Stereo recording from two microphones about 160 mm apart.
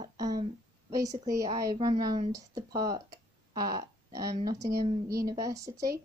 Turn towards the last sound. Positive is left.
turn(degrees=-20)  # may be behind; listen again after turning